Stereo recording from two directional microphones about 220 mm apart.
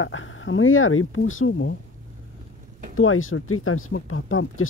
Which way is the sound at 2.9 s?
65° left (ahead or behind).